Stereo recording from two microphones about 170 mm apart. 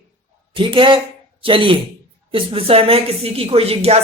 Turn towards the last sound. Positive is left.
turn(degrees=-35)  # may be behind; listen again after turning